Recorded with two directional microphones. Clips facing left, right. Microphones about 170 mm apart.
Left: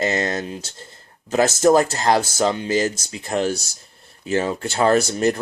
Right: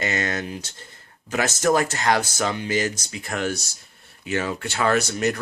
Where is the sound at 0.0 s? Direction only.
30° left (ahead or behind).